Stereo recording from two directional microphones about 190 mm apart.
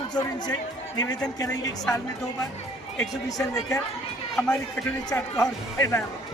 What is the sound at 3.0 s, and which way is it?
Speech, 15° left (ahead or behind).